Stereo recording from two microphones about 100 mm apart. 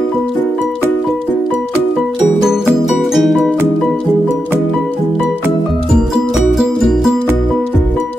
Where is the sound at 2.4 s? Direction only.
5° right (ahead or behind).